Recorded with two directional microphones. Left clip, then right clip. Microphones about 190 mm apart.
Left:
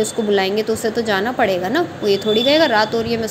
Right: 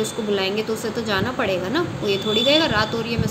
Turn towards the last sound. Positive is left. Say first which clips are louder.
# left 5 dB
turn(degrees=25)  # may be behind; listen again after turning